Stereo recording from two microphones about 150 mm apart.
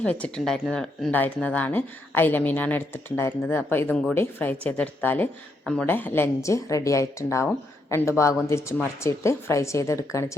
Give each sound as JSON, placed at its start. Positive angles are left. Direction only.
{"t": 0.0, "sound": "speech", "side_deg": 10}